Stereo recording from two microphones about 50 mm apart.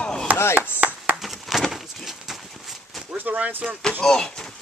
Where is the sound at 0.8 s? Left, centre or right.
Right.